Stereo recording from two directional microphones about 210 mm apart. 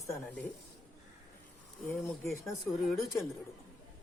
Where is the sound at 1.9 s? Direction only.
10° left (ahead or behind).